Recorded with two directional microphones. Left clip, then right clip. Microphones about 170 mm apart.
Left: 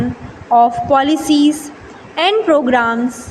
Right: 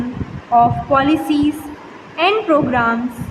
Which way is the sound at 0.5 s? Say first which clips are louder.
Left 2 dB; 35° left (ahead or behind).